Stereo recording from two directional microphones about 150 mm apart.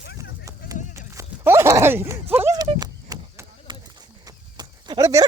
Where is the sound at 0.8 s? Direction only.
55° left (ahead or behind).